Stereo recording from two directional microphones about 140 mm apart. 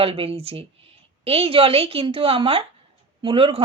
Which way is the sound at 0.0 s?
40° right (ahead or behind).